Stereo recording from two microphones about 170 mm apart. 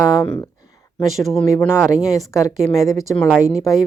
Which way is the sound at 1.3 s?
10° left (ahead or behind).